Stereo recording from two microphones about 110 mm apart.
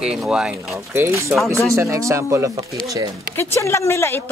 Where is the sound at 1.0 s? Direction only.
25° right (ahead or behind).